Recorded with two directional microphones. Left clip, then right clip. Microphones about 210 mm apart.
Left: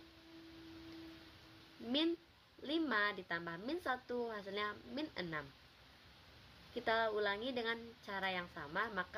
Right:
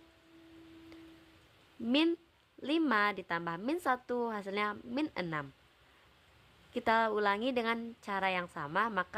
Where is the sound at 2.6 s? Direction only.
55° right (ahead or behind).